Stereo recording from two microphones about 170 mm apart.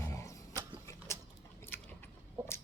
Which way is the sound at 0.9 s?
15° left (ahead or behind).